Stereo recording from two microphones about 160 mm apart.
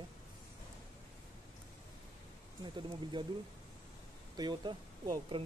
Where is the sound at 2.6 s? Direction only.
30° right (ahead or behind).